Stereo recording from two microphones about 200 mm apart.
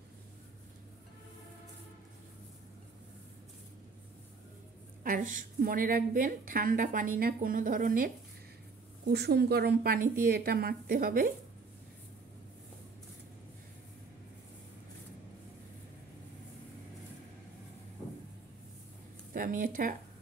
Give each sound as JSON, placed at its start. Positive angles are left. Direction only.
{"t": 5.0, "sound": "a woman's voice", "side_deg": -40}
{"t": 9.0, "sound": "a woman's voice", "side_deg": -55}
{"t": 19.3, "sound": "a woman's voice", "side_deg": -45}